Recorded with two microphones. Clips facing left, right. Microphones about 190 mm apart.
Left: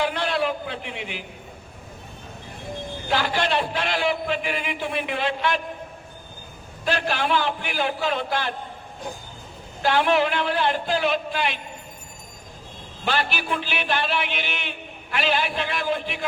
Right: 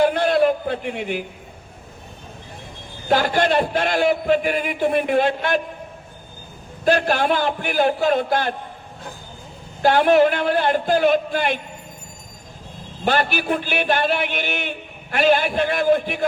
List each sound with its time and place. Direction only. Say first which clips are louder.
0.0 s a man's voice: right 8 dB; 45° right (ahead or behind)
3.1 s a man's voice: right 6 dB; 45° right (ahead or behind)
6.8 s a man's voice: right 7 dB; 45° right (ahead or behind)
9.8 s a man's voice: right 6 dB; 45° right (ahead or behind)
13.1 s a man's voice: right 5 dB; 50° right (ahead or behind)